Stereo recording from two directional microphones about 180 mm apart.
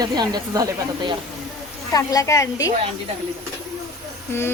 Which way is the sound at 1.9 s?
20° left (ahead or behind).